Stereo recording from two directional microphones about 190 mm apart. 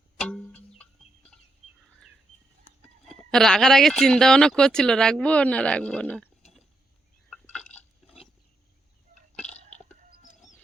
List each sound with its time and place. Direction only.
0.2 s music: 5° left (ahead or behind)
0.8 s chicken: 5° left (ahead or behind)
3.1 s speech: 5° left (ahead or behind)
7.3 s a sound: 5° left (ahead or behind)
9.3 s chewing: 5° left (ahead or behind)
9.6 s a sound: 40° left (ahead or behind)